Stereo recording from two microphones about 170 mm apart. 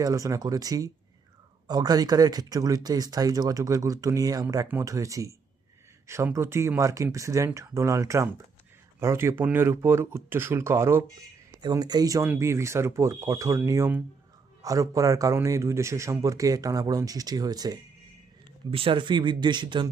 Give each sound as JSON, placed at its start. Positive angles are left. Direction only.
{"t": 0.0, "sound": "speech", "side_deg": -20}